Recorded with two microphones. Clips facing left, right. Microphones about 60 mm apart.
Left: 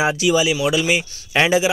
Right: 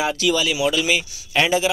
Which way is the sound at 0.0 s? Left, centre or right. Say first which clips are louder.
Left 3 dB; centre.